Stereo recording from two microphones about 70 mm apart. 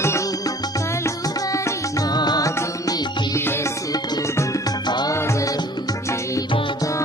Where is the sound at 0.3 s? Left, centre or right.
Left.